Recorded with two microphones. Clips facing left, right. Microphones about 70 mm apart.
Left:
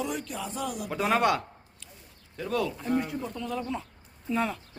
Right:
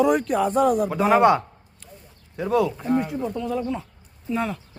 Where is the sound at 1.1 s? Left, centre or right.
Right; by 4.6 s centre.